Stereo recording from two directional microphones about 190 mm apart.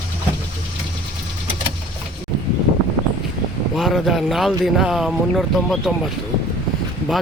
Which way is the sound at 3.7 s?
Centre (ahead or behind).